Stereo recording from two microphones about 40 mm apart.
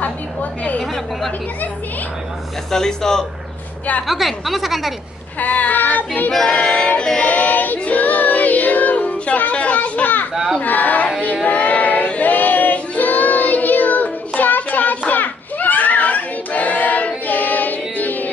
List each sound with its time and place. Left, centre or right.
0.0 s a sound: left
2.7 s speech: centre
4.1 s a woman's voice: centre
5.4 s child singing: left
6.3 s a woman's voice: centre
6.6 s music: left
7.2 s child singing: left
9.2 s a sound: left
9.8 s children playing: left
10.3 s crowd: centre
10.6 s a sound: left
11.4 s child singing: left